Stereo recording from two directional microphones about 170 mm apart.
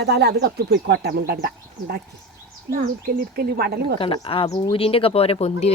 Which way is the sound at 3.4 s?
65° right (ahead or behind).